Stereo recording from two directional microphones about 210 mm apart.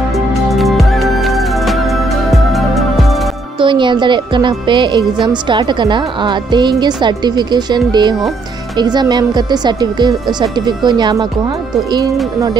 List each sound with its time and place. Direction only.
0.5 s music: centre (ahead or behind)
3.5 s speech: 25° right (ahead or behind)